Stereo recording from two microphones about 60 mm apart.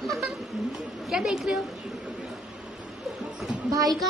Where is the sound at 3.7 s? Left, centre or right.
Right.